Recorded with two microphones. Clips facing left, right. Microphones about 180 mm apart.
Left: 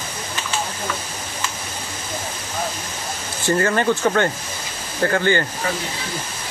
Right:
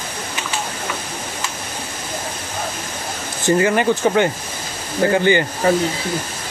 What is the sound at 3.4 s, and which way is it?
Speech, 15° right (ahead or behind).